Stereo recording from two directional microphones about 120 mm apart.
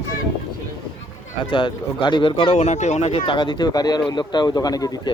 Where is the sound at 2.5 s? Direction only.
70° left (ahead or behind).